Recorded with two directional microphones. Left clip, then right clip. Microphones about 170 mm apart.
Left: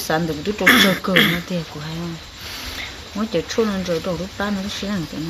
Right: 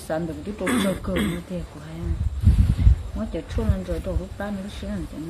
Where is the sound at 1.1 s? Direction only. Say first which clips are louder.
Left 11 dB; 10° right (ahead or behind).